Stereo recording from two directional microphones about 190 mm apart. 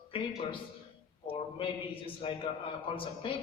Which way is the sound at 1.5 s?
30° left (ahead or behind).